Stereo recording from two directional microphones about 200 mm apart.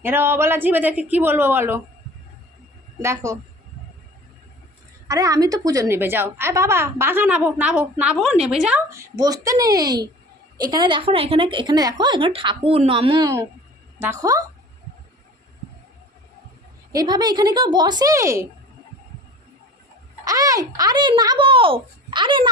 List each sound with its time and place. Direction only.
0.0 s a woman's voice: 10° right (ahead or behind)
3.0 s a woman's voice: 15° right (ahead or behind)
5.0 s a woman's voice: 15° right (ahead or behind)
8.9 s a woman's voice: 15° right (ahead or behind)
16.9 s a woman's voice: 20° right (ahead or behind)
20.2 s a woman's voice: 15° right (ahead or behind)